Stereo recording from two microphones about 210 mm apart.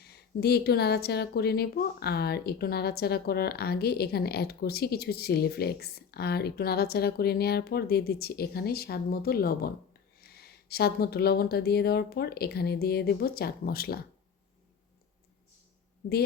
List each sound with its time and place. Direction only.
0.0 s speech: 50° left (ahead or behind)